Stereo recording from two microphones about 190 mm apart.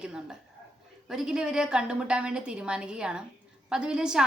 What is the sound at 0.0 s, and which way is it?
A woman's voice, 5° right (ahead or behind).